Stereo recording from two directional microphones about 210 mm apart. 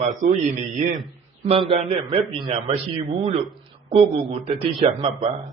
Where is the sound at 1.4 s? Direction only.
25° right (ahead or behind).